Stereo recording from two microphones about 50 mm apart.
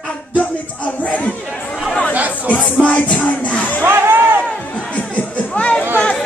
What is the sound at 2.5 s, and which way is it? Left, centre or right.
Music, left.